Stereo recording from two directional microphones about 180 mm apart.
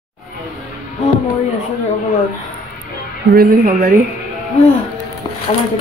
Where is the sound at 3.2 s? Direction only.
55° right (ahead or behind).